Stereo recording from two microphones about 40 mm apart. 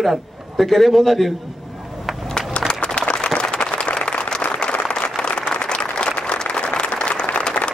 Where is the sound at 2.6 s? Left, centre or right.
Left.